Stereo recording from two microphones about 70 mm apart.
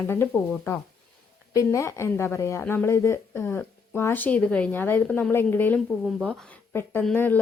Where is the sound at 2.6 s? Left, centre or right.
Left.